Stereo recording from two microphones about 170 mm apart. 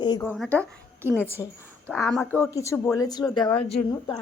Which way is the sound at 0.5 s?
15° right (ahead or behind).